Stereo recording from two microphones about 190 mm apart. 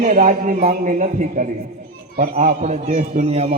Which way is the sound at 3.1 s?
35° right (ahead or behind).